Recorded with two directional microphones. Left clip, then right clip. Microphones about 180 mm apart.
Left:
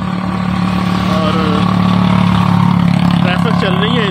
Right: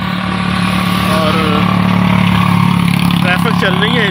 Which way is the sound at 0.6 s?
60° left (ahead or behind).